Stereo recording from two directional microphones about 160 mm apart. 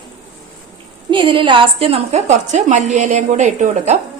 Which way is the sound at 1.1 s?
30° right (ahead or behind).